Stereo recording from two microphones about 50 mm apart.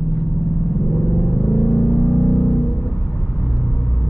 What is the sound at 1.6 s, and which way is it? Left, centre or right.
Music, centre.